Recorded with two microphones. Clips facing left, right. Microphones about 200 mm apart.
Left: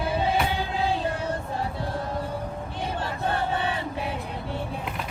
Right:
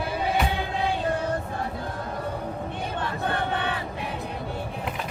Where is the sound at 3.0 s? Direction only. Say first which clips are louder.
Even; 30° left (ahead or behind).